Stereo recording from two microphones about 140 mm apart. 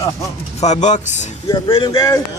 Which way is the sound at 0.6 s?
55° left (ahead or behind).